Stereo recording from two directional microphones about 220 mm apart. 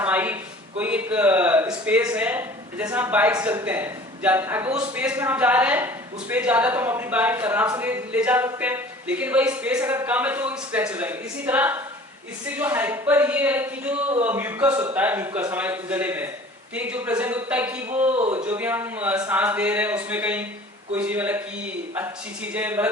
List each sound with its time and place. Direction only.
0.0 s a sound: 10° right (ahead or behind)
0.8 s a man's voice: 5° right (ahead or behind)
18.2 s speech: 30° right (ahead or behind)
18.4 s a man's voice: 10° right (ahead or behind)